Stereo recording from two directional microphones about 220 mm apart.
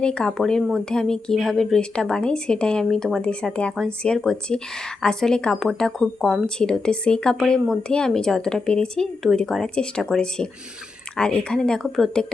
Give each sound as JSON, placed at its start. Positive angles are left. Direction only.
{"t": 0.0, "sound": "speech", "side_deg": 5}